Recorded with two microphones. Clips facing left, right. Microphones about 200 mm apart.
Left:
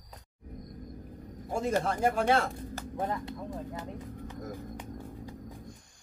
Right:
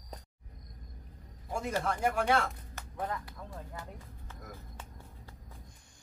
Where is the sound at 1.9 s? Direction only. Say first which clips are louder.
Left 1 dB; 25° left (ahead or behind).